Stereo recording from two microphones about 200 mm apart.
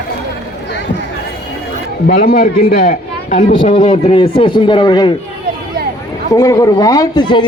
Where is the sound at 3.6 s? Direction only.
30° left (ahead or behind).